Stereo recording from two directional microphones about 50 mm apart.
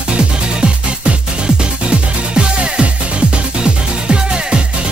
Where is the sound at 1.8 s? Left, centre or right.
Centre.